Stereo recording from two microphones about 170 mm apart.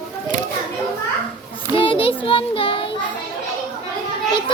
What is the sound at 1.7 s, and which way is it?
Child singing, 30° left (ahead or behind).